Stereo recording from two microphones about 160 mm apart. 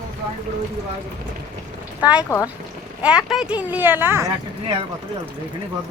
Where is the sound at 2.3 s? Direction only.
20° left (ahead or behind).